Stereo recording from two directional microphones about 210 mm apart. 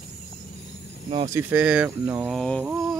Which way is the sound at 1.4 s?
10° right (ahead or behind).